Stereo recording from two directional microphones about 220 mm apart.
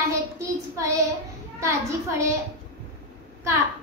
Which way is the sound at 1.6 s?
15° right (ahead or behind).